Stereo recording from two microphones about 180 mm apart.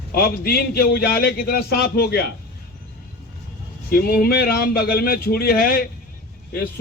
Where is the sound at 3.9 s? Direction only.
55° left (ahead or behind).